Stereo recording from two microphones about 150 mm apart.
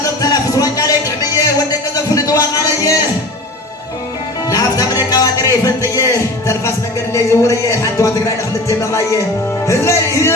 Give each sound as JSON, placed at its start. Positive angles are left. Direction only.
{"t": 0.0, "sound": "music", "side_deg": 25}
{"t": 4.4, "sound": "music", "side_deg": 25}